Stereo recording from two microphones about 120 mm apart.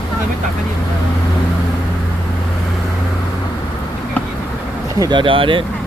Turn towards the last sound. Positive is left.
turn(degrees=-45)  # may be behind; listen again after turning